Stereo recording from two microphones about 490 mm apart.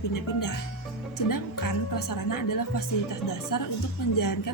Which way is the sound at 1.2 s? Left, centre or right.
Left.